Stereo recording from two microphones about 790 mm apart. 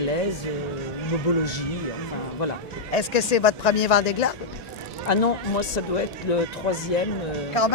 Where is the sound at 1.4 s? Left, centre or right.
Left.